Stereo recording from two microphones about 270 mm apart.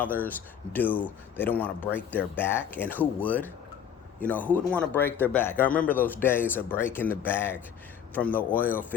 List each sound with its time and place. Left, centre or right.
0.0 s speech: centre